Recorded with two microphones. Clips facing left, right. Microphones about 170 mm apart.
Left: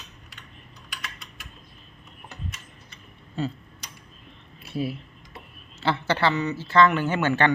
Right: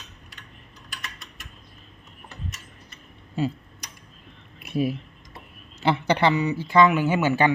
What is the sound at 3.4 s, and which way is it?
Speech, 10° right (ahead or behind).